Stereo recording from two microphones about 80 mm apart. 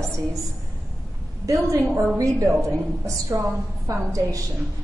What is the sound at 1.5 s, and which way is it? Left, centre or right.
A woman's voice, right.